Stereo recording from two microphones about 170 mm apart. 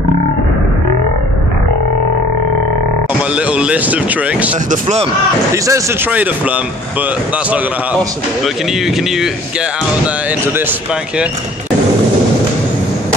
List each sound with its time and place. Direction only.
3.3 s speech: 5° right (ahead or behind)
4.6 s speech: 40° right (ahead or behind)
5.5 s speech: 15° right (ahead or behind)
8.8 s speech: centre (ahead or behind)